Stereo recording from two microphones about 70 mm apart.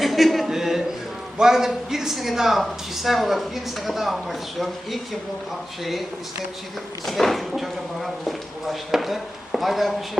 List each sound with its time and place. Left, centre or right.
0.0 s a sound: centre
1.4 s speech: centre
7.0 s speech: centre